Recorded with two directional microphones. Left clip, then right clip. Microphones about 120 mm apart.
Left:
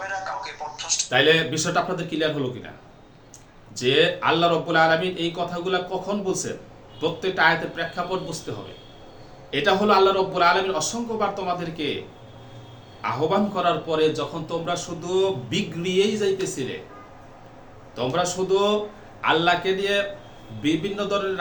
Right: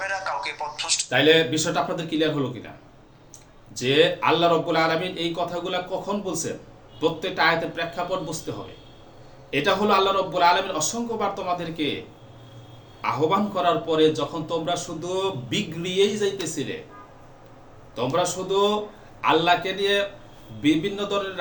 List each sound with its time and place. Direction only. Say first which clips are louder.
0.0 s a sound: right 2 dB; 40° right (ahead or behind)
1.1 s a man's voice: even; 20° left (ahead or behind)
3.8 s a man's voice: even; 10° left (ahead or behind)
9.5 s a man's voice: left 1 dB; 10° left (ahead or behind)
13.0 s a man's voice: even; 5° left (ahead or behind)
18.2 s a man's voice: left 1 dB; 10° left (ahead or behind)